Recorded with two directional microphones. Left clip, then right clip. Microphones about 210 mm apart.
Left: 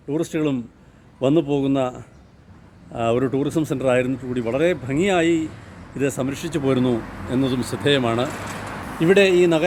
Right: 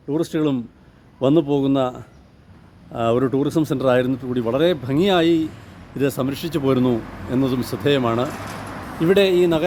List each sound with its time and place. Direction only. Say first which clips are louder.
0.1 s speech: right 2 dB; 20° right (ahead or behind)
6.0 s speech: right 2 dB; 20° right (ahead or behind)
9.0 s a man's voice: left 1 dB; centre (ahead or behind)